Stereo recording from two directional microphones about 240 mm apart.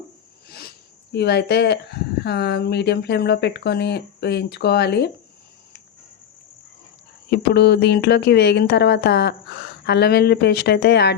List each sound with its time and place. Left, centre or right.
0.4 s a sound: left
1.1 s speech: left
7.3 s speech: left